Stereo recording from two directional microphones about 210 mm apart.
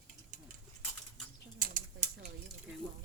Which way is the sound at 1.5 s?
40° right (ahead or behind).